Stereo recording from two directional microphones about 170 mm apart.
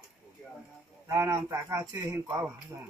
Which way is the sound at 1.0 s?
15° right (ahead or behind).